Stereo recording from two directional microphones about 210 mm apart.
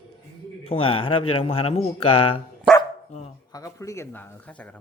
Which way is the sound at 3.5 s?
15° left (ahead or behind).